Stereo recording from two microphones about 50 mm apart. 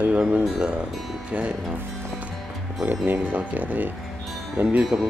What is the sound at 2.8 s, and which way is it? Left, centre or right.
Speech, right.